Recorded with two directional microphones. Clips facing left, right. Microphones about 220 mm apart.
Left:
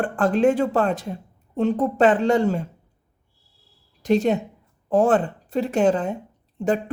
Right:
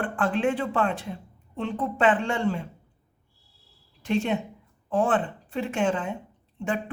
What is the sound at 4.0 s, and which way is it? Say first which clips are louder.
Speech: left 6 dB; 40° left (ahead or behind).